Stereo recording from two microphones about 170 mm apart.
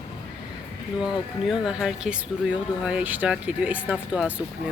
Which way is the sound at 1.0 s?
5° right (ahead or behind).